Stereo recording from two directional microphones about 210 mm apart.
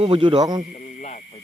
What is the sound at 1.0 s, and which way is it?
Snake, 35° left (ahead or behind).